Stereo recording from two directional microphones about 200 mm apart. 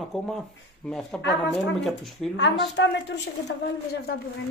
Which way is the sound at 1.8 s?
Centre (ahead or behind).